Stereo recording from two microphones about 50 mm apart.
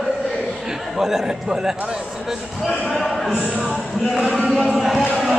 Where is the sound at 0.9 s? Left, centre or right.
Centre.